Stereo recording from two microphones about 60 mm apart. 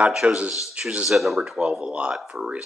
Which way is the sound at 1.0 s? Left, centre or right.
Centre.